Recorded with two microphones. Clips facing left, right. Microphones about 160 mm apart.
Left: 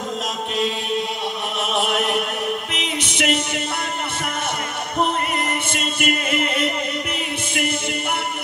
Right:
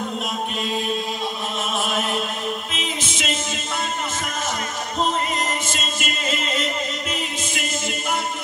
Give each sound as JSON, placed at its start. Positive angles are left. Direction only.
{"t": 1.6, "sound": "chant", "side_deg": 70}
{"t": 2.7, "sound": "music", "side_deg": 65}
{"t": 5.7, "sound": "music", "side_deg": 60}